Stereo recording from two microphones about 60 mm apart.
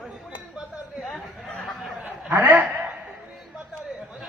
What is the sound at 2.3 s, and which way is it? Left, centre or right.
Speech, right.